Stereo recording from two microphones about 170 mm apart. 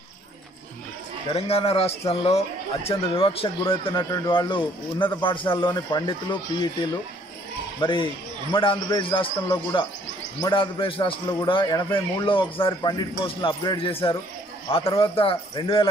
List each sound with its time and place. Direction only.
1.3 s a man's voice: 35° left (ahead or behind)
7.8 s a man's voice: 30° left (ahead or behind)